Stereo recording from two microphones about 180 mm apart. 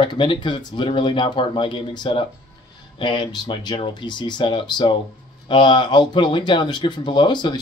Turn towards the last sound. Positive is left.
turn(degrees=25)  # may be behind; listen again after turning